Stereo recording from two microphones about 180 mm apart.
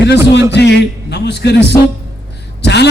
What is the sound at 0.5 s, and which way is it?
A man's voice, 70° left (ahead or behind).